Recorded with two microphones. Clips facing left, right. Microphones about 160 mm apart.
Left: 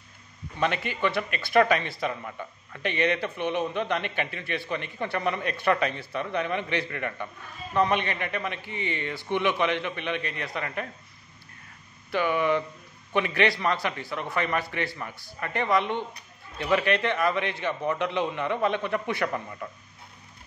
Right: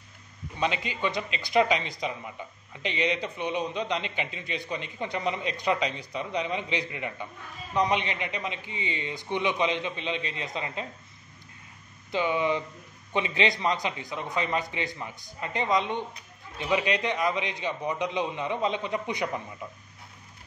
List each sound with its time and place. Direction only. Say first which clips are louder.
0.6 s a man's voice: left 2 dB; 15° right (ahead or behind)
12.1 s a man's voice: left 2 dB; 20° right (ahead or behind)